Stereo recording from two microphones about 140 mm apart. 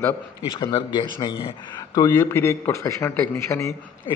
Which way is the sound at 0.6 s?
35° left (ahead or behind).